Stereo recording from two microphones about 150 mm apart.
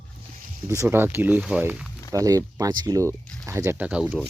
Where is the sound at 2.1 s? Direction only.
25° right (ahead or behind).